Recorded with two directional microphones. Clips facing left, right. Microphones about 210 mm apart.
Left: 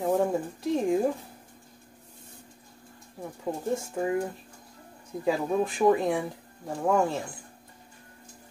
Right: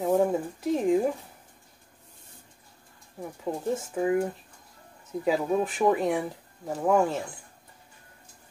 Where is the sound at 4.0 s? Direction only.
Centre (ahead or behind).